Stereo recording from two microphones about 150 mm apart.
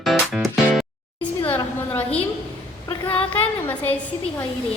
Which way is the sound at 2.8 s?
35° left (ahead or behind).